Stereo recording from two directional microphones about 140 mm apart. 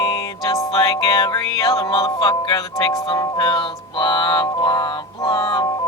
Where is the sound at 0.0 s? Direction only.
25° left (ahead or behind).